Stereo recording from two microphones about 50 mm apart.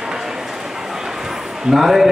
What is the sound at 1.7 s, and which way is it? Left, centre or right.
Speech, centre.